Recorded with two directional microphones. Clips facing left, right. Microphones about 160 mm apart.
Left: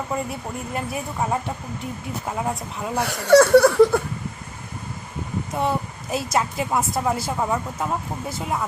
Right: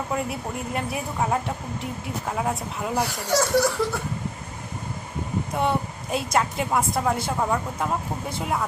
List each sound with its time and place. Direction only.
0.1 s a woman's voice: centre (ahead or behind)
3.1 s speech: 60° left (ahead or behind)
5.5 s a woman's voice: centre (ahead or behind)